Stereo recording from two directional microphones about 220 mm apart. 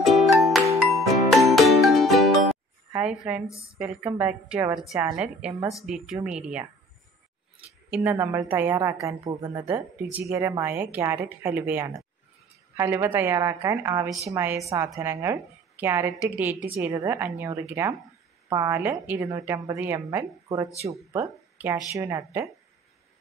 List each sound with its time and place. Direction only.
0.0 s music: centre (ahead or behind)
3.7 s a woman's voice: 5° right (ahead or behind)
9.2 s speech: 25° right (ahead or behind)
10.1 s a woman's voice: 10° right (ahead or behind)